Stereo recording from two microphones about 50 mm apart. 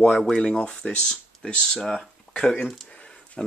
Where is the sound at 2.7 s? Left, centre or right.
Left.